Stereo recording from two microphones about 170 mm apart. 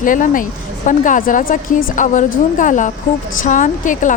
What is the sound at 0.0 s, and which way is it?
A woman's voice, 50° left (ahead or behind).